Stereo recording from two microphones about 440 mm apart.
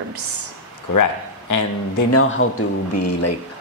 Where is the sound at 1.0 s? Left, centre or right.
Left.